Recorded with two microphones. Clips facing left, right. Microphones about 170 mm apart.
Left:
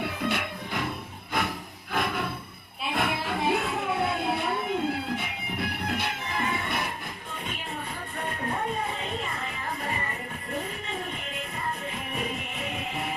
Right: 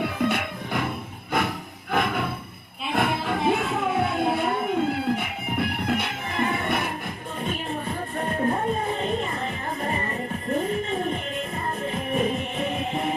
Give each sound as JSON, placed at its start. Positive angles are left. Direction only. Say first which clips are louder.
{"t": 0.0, "sound": "music", "louder": "right 5 dB", "side_deg": -55}
{"t": 8.2, "sound": "music", "louder": "right 6 dB", "side_deg": -40}
{"t": 12.2, "sound": "music", "louder": "right 8 dB", "side_deg": -35}